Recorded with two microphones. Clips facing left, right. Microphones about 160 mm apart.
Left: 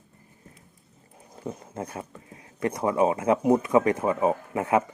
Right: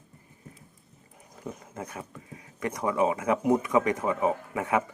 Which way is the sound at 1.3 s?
25° left (ahead or behind).